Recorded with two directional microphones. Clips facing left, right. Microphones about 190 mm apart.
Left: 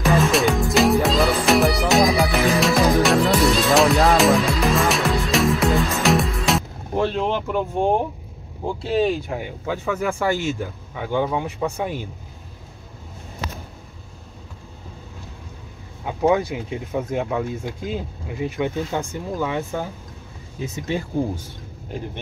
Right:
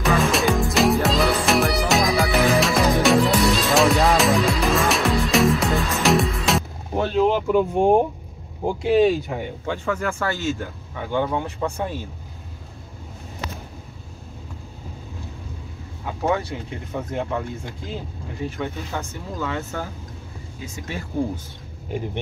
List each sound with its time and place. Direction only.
0.0 s music: centre (ahead or behind)
8.8 s speech: 5° right (ahead or behind); by 12.1 s 15° left (ahead or behind)
16.1 s speech: 15° left (ahead or behind)
18.4 s speech: 15° left (ahead or behind)